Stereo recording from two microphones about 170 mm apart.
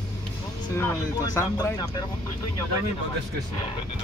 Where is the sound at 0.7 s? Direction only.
20° left (ahead or behind).